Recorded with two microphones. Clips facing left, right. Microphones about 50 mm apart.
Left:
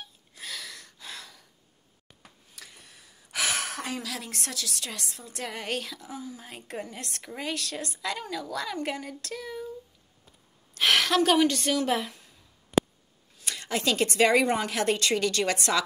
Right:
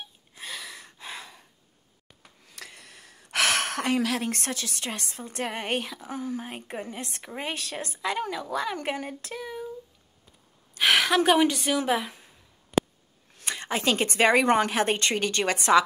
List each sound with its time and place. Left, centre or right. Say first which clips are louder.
0.3 s a sound: right 1 dB; centre
2.4 s speech: right 6 dB; right
6.0 s a woman's voice: right 7 dB; right
9.2 s child singing: right 1 dB; right
10.7 s a woman's voice: right 2 dB; centre
13.5 s a woman's voice: right 2 dB; right